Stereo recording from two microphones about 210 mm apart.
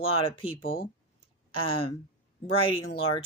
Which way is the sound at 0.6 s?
45° left (ahead or behind).